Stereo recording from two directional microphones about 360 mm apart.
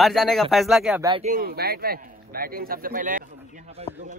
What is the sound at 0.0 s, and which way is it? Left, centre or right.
Speech, centre.